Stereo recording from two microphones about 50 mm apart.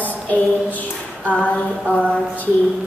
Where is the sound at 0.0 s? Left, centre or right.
Left.